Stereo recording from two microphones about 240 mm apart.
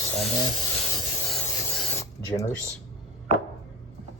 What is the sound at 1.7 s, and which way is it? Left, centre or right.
Filing, centre.